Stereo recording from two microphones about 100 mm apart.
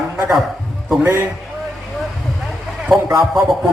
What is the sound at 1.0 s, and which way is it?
Speech, 25° right (ahead or behind).